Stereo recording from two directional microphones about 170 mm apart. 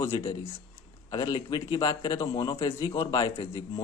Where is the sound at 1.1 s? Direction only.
25° left (ahead or behind).